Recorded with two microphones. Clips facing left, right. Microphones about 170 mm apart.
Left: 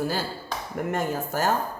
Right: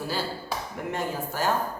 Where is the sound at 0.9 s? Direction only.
45° left (ahead or behind).